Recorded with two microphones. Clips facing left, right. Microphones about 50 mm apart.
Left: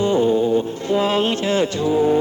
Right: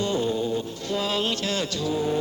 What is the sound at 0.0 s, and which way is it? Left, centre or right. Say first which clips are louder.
Music: left 8 dB; left.